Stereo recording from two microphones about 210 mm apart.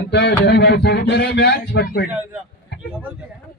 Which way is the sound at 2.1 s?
10° right (ahead or behind).